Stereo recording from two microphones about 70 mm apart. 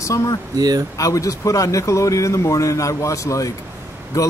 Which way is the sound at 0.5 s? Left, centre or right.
Right.